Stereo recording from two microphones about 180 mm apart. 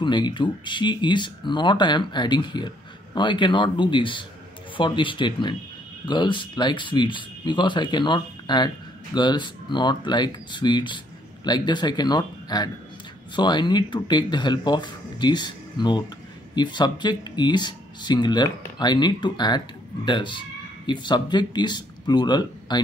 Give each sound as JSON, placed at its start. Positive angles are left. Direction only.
{"t": 0.0, "sound": "speech", "side_deg": 25}